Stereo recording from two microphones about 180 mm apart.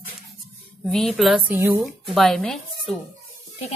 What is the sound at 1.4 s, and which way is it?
A woman's voice, 10° right (ahead or behind).